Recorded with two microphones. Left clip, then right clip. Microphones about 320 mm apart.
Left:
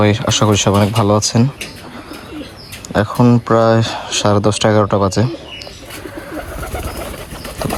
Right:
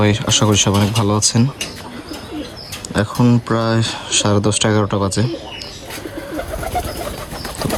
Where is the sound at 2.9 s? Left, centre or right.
Centre.